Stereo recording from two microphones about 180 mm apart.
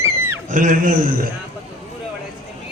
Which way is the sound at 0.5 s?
45° right (ahead or behind).